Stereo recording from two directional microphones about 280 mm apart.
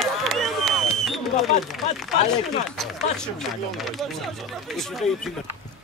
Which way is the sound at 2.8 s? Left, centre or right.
Centre.